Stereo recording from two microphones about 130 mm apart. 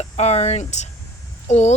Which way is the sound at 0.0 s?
55° left (ahead or behind).